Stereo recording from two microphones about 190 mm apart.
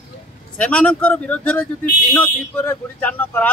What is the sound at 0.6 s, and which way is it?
Speech, 5° left (ahead or behind).